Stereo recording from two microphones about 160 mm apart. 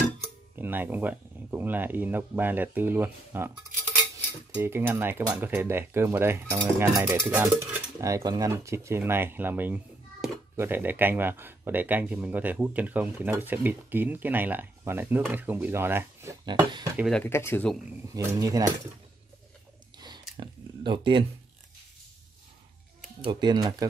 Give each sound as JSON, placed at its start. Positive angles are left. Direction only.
{"t": 0.6, "sound": "speech", "side_deg": -15}
{"t": 17.1, "sound": "speech", "side_deg": 15}
{"t": 18.1, "sound": "speech", "side_deg": -20}
{"t": 20.3, "sound": "a sound", "side_deg": -30}
{"t": 23.2, "sound": "speech", "side_deg": -25}